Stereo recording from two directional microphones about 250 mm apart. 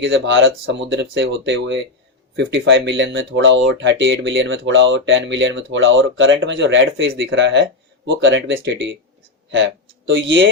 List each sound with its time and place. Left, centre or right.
0.0 s speech: right
10.1 s speech: right